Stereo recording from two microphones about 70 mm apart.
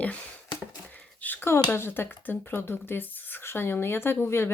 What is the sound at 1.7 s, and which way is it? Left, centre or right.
A woman's voice, left.